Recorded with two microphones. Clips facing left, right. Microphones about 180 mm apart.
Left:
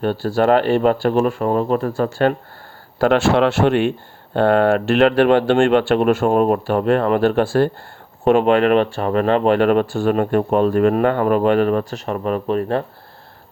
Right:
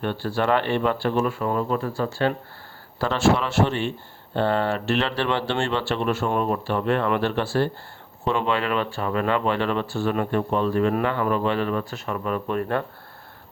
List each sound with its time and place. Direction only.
0.0 s speech: 40° left (ahead or behind)
3.0 s speech: 65° left (ahead or behind); by 12.4 s 45° left (ahead or behind)
12.5 s speech: 25° left (ahead or behind)